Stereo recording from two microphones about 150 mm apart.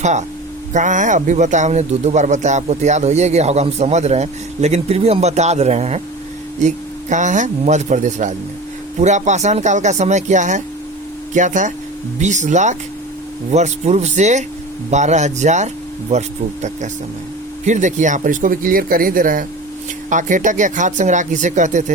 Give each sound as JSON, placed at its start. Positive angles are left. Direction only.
{"t": 0.0, "sound": "speech", "side_deg": -50}